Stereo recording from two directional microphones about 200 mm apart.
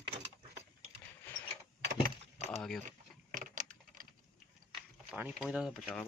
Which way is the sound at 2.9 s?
40° right (ahead or behind).